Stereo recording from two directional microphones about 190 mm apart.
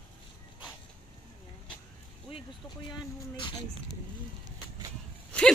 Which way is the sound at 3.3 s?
25° left (ahead or behind).